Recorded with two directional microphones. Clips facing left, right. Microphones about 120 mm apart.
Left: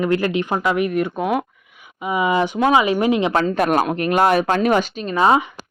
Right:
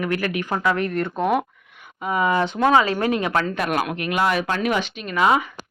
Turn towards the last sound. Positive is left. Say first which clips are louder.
# left 3 dB
turn(degrees=30)  # may be behind; listen again after turning